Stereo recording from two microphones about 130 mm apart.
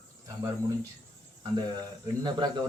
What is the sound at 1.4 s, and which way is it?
Speech, 35° right (ahead or behind).